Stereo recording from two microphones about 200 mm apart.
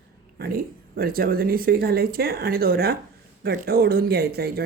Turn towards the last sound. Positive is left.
turn(degrees=-50)  # may be behind; listen again after turning